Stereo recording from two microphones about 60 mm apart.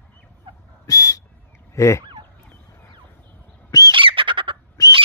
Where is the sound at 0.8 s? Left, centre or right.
Left.